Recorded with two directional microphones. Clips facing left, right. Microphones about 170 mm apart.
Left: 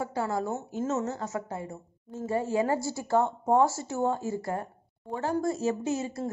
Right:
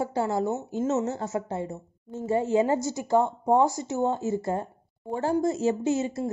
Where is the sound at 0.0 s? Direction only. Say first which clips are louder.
Right 4 dB; 25° right (ahead or behind).